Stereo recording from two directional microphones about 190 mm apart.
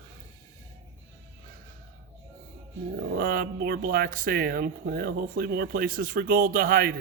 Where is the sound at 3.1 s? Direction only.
50° right (ahead or behind).